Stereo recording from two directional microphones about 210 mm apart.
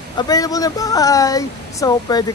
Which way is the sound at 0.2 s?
15° left (ahead or behind).